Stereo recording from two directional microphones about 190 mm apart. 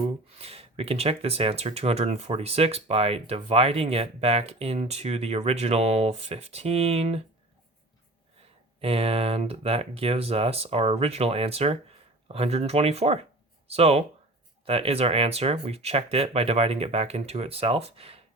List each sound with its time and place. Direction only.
0.0 s speech: 30° right (ahead or behind)
8.8 s speech: 30° right (ahead or behind)